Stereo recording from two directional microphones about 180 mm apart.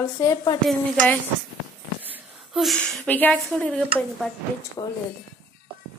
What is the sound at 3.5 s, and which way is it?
Speech, 5° left (ahead or behind).